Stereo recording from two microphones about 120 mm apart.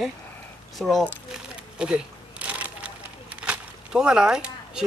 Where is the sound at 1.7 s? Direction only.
10° right (ahead or behind).